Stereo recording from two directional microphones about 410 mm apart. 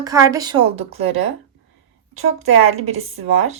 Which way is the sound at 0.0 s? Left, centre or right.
Centre.